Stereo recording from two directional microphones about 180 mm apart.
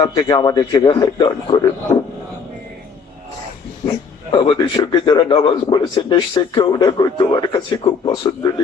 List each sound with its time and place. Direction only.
0.0 s a man's voice: 20° left (ahead or behind)
3.8 s a man's voice: 25° left (ahead or behind)